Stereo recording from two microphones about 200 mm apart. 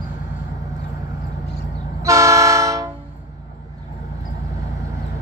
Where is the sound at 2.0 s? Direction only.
15° right (ahead or behind).